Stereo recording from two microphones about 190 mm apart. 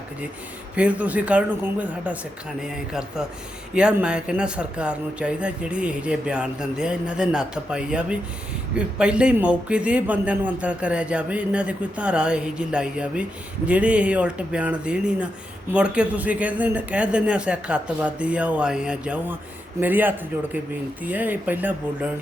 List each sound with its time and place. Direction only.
0.8 s a man's voice: 5° right (ahead or behind)